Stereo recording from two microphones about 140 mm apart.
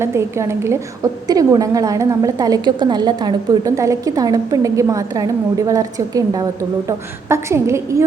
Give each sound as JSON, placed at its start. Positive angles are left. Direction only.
{"t": 0.0, "sound": "a woman's voice", "side_deg": -20}